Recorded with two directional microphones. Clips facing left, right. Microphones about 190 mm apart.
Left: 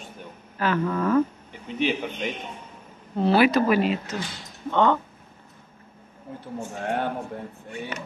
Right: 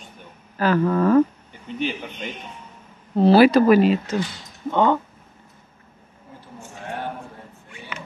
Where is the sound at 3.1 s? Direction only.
35° right (ahead or behind).